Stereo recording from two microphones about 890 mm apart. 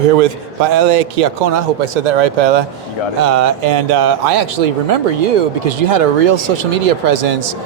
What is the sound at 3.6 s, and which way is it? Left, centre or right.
Speech, right.